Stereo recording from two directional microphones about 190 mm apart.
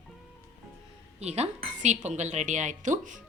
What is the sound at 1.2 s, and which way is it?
A woman's voice, 35° right (ahead or behind).